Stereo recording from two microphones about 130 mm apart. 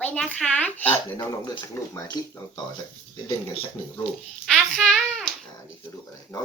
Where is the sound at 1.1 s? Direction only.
30° left (ahead or behind).